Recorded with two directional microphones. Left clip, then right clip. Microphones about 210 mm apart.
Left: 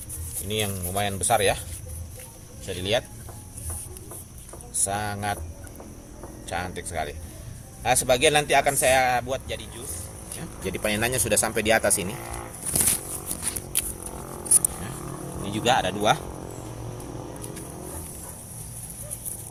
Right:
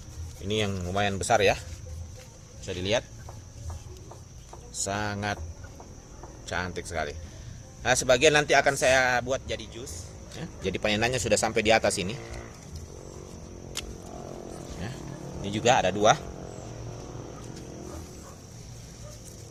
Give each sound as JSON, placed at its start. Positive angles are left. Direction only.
{"t": 0.4, "sound": "speech", "side_deg": -50}
{"t": 2.6, "sound": "speech", "side_deg": -40}
{"t": 4.9, "sound": "speech", "side_deg": -45}
{"t": 6.4, "sound": "speech", "side_deg": -50}
{"t": 10.4, "sound": "speech", "side_deg": -35}
{"t": 15.5, "sound": "speech", "side_deg": -45}